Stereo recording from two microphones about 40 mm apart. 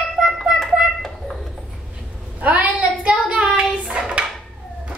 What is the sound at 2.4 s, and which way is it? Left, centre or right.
Child singing, right.